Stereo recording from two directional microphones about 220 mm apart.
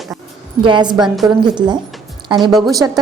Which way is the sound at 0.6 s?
20° right (ahead or behind).